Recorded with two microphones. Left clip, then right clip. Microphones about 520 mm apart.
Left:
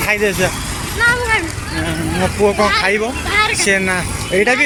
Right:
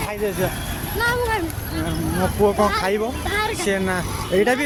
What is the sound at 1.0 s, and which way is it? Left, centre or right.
Vehicle, right.